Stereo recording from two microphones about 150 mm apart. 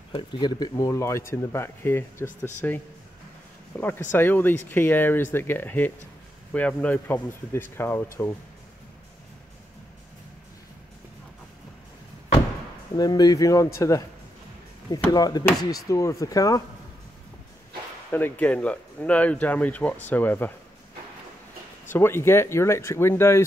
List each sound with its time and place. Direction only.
0.1 s speech: 30° left (ahead or behind)
12.9 s speech: 25° left (ahead or behind)
15.1 s speech: 25° left (ahead or behind)
18.1 s speech: 10° left (ahead or behind)
21.9 s speech: 15° left (ahead or behind)